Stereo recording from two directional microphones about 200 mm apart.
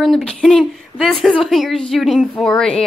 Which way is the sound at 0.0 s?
Centre (ahead or behind).